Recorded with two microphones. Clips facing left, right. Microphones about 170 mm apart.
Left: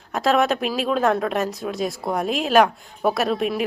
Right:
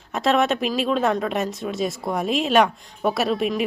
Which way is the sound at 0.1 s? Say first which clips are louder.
Left 1 dB; centre (ahead or behind).